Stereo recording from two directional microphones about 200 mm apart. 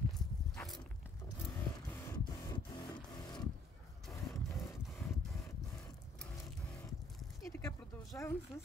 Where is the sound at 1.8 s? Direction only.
10° left (ahead or behind).